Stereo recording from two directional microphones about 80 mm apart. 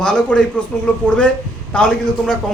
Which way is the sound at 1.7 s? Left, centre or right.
Centre.